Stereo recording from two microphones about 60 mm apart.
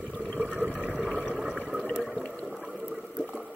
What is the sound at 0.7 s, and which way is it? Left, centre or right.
Water, left.